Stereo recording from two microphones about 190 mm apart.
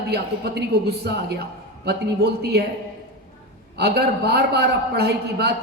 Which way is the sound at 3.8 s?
60° right (ahead or behind).